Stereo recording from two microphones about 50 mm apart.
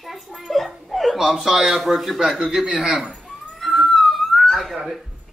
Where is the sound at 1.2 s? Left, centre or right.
Centre.